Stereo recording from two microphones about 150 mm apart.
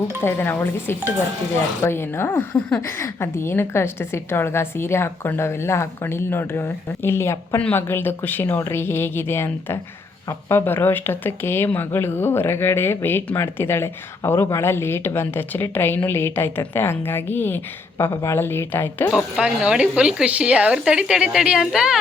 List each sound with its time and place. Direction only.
0.2 s speech: 15° left (ahead or behind)
19.1 s speech: 5° right (ahead or behind)